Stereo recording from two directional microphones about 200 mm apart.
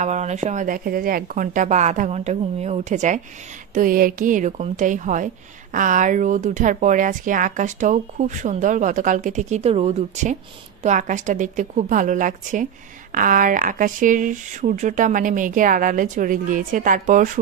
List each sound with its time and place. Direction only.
0.0 s speech: 35° right (ahead or behind)